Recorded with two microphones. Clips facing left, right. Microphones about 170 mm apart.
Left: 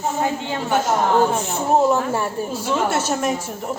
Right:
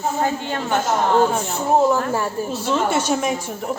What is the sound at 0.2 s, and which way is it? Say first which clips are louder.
Speech: even; 15° left (ahead or behind).